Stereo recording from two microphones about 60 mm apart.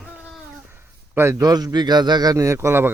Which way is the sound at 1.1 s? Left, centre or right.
Right.